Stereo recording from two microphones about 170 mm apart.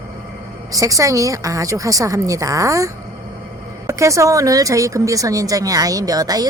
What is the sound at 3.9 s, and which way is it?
A woman's voice, 20° right (ahead or behind).